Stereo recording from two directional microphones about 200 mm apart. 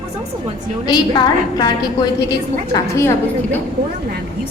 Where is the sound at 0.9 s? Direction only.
20° left (ahead or behind).